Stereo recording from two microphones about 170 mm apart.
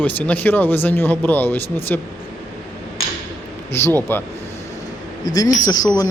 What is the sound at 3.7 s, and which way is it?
Speech, 15° left (ahead or behind).